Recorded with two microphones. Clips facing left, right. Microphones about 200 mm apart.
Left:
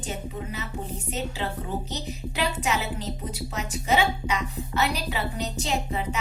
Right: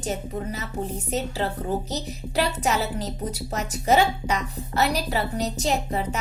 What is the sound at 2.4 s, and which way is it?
A woman's voice, 40° right (ahead or behind).